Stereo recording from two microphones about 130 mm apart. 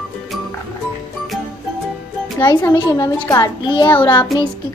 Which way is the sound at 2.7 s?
30° left (ahead or behind).